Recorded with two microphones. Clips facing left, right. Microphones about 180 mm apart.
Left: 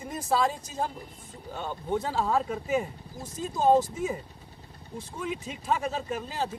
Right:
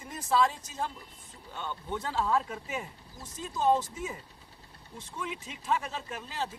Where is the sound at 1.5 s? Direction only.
40° left (ahead or behind).